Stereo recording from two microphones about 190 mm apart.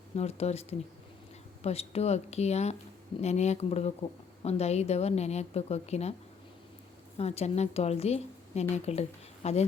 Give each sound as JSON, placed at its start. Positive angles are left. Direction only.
{"t": 0.2, "sound": "a woman's voice", "side_deg": 35}
{"t": 7.2, "sound": "a woman's voice", "side_deg": 35}